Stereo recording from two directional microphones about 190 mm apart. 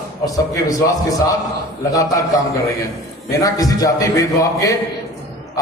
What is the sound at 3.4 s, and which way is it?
A man's voice, 20° left (ahead or behind).